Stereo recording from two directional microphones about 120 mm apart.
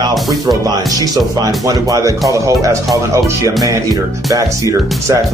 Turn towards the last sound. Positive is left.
turn(degrees=-25)  # may be behind; listen again after turning